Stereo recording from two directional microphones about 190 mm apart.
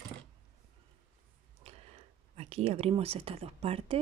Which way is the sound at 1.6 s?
30° right (ahead or behind).